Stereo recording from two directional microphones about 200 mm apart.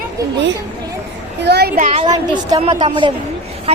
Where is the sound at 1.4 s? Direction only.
55° right (ahead or behind).